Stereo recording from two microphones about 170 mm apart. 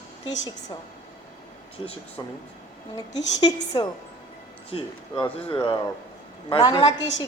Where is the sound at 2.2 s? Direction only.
25° left (ahead or behind).